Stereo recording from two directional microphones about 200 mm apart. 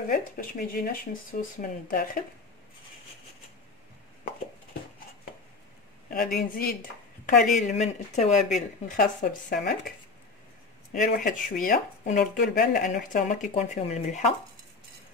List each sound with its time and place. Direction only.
0.1 s speech: 45° left (ahead or behind)
6.0 s speech: 45° left (ahead or behind)
10.9 s speech: 45° left (ahead or behind)